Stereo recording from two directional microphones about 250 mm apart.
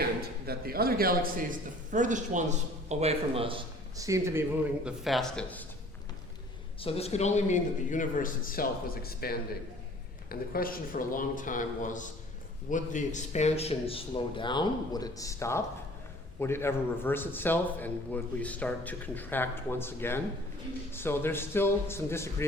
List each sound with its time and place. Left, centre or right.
0.0 s a man's voice: right; by 4.4 s centre
4.9 s speech: centre
6.8 s a man's voice: left